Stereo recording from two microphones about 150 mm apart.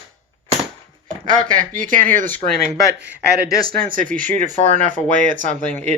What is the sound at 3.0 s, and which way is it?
Speech, 90° right.